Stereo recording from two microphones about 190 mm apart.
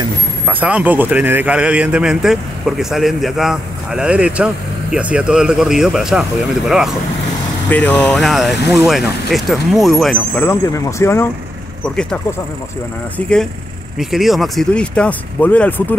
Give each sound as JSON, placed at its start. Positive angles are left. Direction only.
{"t": 0.5, "sound": "speech", "side_deg": -10}
{"t": 10.4, "sound": "speech", "side_deg": 15}